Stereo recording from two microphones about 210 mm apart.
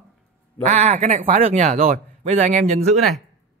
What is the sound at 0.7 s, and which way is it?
Speech, 30° right (ahead or behind).